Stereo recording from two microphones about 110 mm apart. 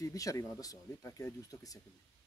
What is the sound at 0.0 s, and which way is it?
Speech, 30° left (ahead or behind).